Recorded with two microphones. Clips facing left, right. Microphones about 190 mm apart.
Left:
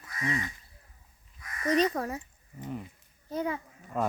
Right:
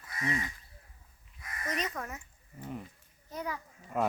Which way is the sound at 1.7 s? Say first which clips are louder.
Left 11 dB; 35° left (ahead or behind).